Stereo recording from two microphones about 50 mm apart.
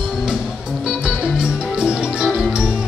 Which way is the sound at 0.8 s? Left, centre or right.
Centre.